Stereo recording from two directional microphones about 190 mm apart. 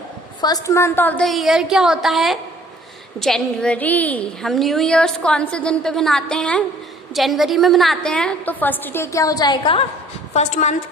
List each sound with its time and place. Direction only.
0.4 s a woman's voice: 15° left (ahead or behind)
10.3 s a woman's voice: 35° left (ahead or behind)